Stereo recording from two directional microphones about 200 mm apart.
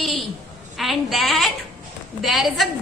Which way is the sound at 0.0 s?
Centre (ahead or behind).